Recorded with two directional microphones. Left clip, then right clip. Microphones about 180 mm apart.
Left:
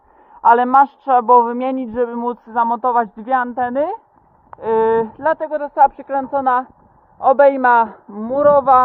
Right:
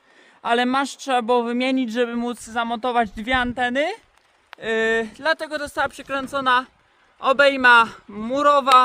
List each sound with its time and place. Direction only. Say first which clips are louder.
0.4 s a man's voice: left 10 dB; 20° right (ahead or behind)